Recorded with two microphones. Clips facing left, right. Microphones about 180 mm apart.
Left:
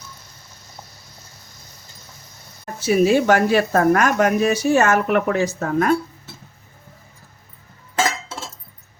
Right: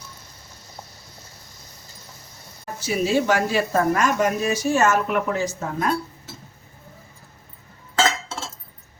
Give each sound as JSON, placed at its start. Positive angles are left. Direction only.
{"t": 2.8, "sound": "speech", "side_deg": 60}